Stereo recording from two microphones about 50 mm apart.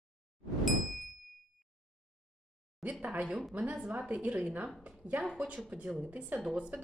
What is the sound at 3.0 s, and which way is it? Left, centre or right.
Speech, right.